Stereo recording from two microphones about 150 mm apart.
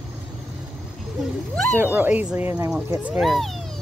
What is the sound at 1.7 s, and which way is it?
Speech, 15° right (ahead or behind).